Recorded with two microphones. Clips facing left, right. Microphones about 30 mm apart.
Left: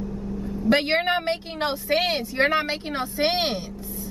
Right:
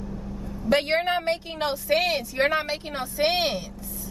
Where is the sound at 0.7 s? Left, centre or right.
Left.